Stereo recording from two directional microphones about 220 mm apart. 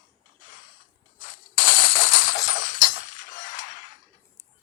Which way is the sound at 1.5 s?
65° left (ahead or behind).